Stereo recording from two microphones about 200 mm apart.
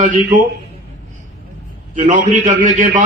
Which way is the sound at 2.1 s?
40° right (ahead or behind).